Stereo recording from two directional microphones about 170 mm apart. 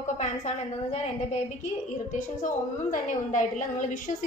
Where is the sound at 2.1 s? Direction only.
50° left (ahead or behind).